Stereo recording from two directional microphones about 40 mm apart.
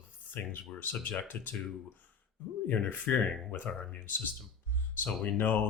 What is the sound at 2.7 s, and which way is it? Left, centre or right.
Speech, left.